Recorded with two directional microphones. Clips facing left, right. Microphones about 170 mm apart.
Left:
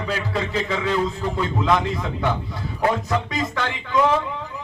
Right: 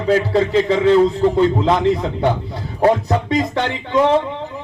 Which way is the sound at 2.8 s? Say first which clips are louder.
Right 7 dB; 30° right (ahead or behind).